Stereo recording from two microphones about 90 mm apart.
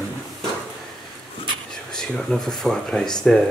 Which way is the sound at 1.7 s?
5° left (ahead or behind).